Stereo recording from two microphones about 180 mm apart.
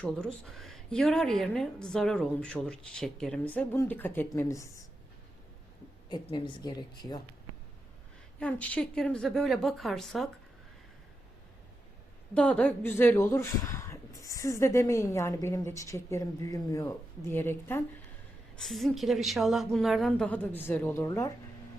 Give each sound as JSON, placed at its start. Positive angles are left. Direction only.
{"t": 0.0, "sound": "a woman's voice", "side_deg": 5}
{"t": 6.1, "sound": "speech", "side_deg": 25}
{"t": 8.4, "sound": "a woman's voice", "side_deg": 5}
{"t": 12.3, "sound": "speech", "side_deg": 5}
{"t": 18.5, "sound": "a woman's voice", "side_deg": 0}